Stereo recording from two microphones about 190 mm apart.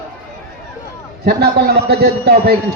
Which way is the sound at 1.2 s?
55° right (ahead or behind).